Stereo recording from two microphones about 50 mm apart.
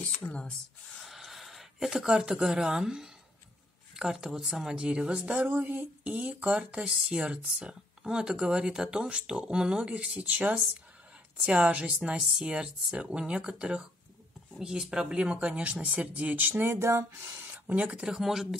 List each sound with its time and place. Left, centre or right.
0.3 s speech: centre
0.9 s speech: centre; by 5.9 s right
6.0 s speech: centre; by 16.7 s right
16.7 s speech: right
17.5 s a sound: right
18.0 s speech: centre